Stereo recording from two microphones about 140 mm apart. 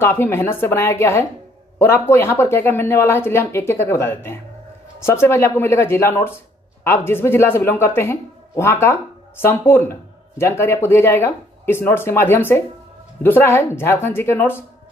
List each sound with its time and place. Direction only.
0.0 s speech: 15° left (ahead or behind)